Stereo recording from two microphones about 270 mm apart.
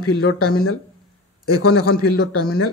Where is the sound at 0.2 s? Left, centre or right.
Left.